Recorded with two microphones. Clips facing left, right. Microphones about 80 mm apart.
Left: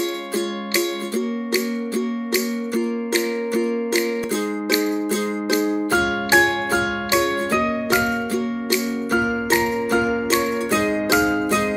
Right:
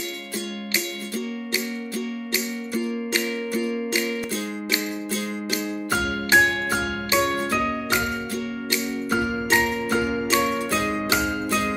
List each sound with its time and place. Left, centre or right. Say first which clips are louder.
5.5 s music: left 8 dB; left
10.3 s music: left 2 dB; left